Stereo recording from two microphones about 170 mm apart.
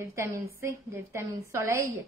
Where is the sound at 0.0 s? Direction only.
15° right (ahead or behind).